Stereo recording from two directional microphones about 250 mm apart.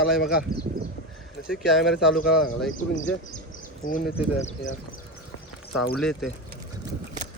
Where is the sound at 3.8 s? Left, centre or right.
Left.